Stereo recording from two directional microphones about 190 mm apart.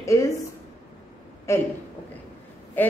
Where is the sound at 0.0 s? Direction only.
15° left (ahead or behind).